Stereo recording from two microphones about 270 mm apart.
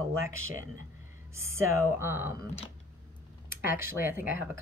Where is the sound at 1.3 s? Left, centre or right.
Centre.